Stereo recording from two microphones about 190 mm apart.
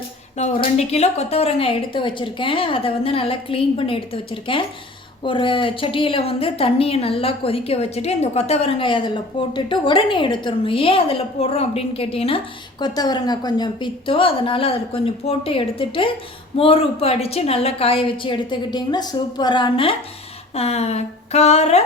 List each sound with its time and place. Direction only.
0.3 s a woman's voice: 35° left (ahead or behind)